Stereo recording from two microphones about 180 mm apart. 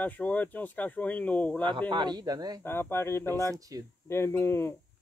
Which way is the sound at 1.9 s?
25° right (ahead or behind).